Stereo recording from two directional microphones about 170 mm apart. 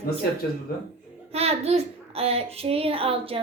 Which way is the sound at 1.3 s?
35° right (ahead or behind).